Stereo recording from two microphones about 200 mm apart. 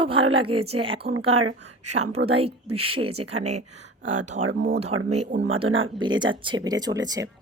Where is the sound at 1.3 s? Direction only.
90° right.